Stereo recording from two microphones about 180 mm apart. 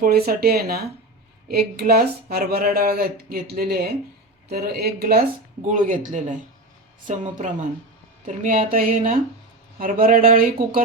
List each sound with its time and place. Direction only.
0.0 s speech: 60° right (ahead or behind)